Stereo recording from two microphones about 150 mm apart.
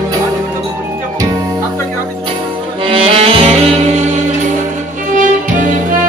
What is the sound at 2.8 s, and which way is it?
Saxophone, 40° right (ahead or behind).